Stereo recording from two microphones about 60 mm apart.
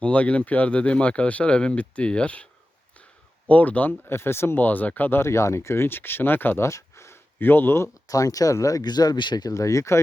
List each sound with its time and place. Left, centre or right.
0.0 s speech: left
3.5 s speech: left
4.1 s speech: left
5.2 s speech: left
6.7 s a sound: left
7.3 s speech: left
8.0 s speech: left